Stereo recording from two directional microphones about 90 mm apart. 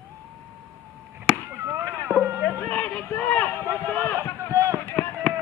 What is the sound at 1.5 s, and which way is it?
Chop, 30° right (ahead or behind).